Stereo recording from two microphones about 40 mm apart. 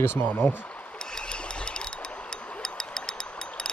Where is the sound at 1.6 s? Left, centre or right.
Left.